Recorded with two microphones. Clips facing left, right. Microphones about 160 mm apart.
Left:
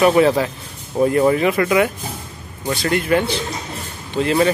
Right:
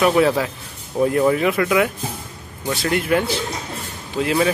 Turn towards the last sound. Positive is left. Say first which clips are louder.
# left 2 dB
turn(degrees=-5)  # may be behind; listen again after turning